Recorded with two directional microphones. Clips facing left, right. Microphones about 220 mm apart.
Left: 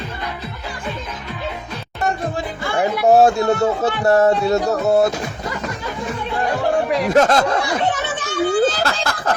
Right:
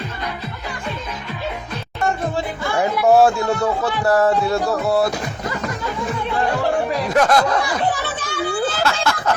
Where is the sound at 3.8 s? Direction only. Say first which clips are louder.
Left 2 dB; 20° left (ahead or behind).